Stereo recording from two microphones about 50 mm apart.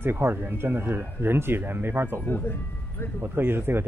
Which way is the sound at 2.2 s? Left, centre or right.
Left.